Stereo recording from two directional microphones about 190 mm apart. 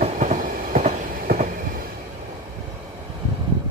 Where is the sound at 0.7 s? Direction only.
40° right (ahead or behind).